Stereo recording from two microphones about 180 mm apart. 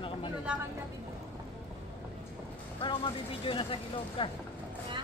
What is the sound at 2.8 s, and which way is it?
Speech, 30° left (ahead or behind).